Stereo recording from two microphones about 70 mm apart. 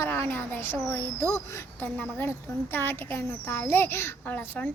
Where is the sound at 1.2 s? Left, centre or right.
Left.